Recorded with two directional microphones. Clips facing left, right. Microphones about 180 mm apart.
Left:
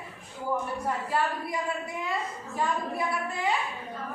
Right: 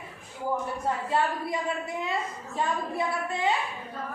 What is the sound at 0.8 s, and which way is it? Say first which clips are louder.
Speech: right 3 dB; 25° right (ahead or behind).